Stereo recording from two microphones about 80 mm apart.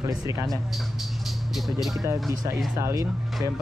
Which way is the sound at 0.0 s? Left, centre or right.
Right.